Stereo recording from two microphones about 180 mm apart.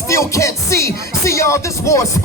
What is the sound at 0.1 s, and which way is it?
Speech, 15° left (ahead or behind).